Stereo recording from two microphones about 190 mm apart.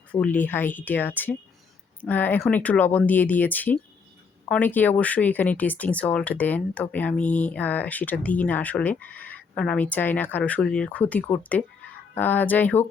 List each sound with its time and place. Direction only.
0.1 s speech: 10° left (ahead or behind)